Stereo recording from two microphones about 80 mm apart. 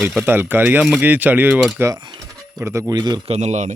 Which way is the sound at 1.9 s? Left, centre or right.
Right.